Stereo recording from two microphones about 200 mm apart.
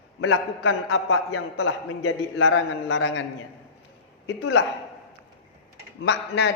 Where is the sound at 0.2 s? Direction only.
90° left; by 3.2 s 65° left (ahead or behind).